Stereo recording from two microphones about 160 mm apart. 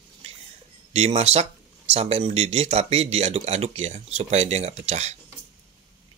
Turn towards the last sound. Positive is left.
turn(degrees=-45)  # may be behind; listen again after turning